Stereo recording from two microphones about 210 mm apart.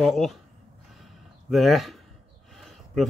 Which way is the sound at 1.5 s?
Centre (ahead or behind).